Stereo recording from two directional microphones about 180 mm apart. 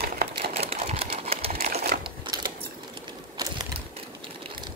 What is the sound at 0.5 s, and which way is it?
Sewing machine, 35° right (ahead or behind).